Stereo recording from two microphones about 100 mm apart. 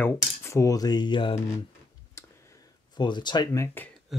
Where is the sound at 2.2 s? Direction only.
30° left (ahead or behind).